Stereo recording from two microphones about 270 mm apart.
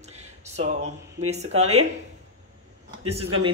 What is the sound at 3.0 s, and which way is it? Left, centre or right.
Speech, right.